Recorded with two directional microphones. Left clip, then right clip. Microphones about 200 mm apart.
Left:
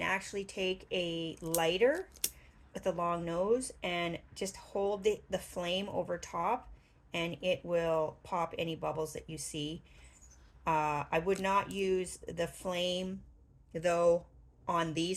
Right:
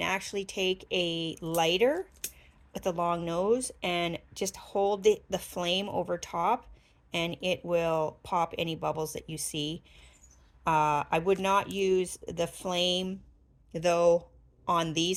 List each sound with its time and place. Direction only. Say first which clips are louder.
0.0 s a woman's voice: right 3 dB; 45° right (ahead or behind)